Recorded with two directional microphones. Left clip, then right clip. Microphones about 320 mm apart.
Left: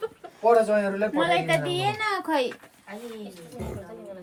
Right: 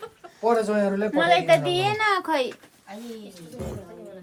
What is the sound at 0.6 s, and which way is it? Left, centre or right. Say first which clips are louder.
A woman's voice: even; right.